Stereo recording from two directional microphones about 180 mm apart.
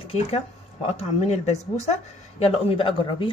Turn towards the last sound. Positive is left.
turn(degrees=30)  # may be behind; listen again after turning